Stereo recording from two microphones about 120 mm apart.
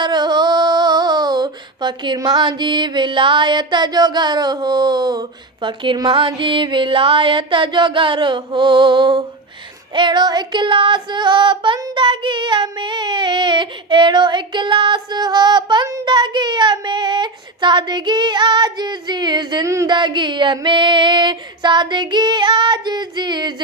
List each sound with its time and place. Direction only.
0.0 s a sound: 40° right (ahead or behind)
5.6 s music: 40° right (ahead or behind)
9.9 s female singing: 40° right (ahead or behind)
19.6 s speech: 25° right (ahead or behind)
19.9 s female singing: 40° right (ahead or behind)